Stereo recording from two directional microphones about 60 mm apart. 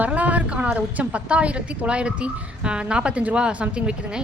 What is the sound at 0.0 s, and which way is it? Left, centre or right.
A woman's voice, right.